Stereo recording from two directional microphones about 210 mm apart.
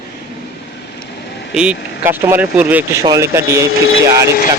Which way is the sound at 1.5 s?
5° right (ahead or behind).